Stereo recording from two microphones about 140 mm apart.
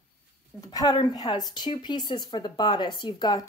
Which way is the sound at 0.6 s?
25° left (ahead or behind).